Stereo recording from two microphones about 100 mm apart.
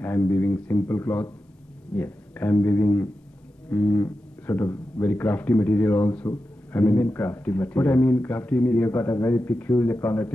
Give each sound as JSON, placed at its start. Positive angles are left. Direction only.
{"t": 0.0, "sound": "speech", "side_deg": 15}